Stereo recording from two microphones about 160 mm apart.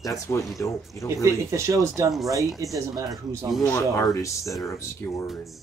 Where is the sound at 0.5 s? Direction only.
20° left (ahead or behind).